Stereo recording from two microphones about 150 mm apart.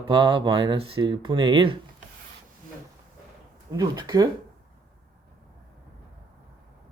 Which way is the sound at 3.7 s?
30° right (ahead or behind).